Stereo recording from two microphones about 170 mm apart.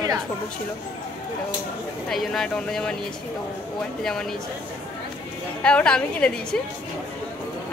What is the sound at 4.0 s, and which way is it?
Speech, 5° left (ahead or behind).